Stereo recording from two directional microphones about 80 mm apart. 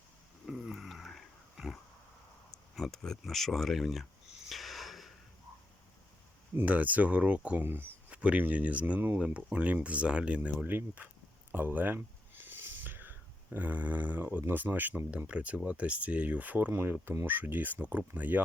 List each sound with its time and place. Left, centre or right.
0.4 s a sound: centre
6.6 s speech: centre
8.1 s speech: centre